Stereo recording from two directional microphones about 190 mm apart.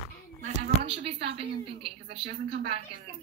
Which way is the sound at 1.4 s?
30° right (ahead or behind).